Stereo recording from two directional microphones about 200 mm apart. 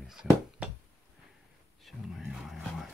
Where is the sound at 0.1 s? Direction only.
5° right (ahead or behind).